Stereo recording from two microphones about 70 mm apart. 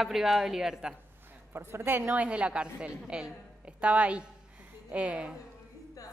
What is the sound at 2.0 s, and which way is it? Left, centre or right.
Speech, centre.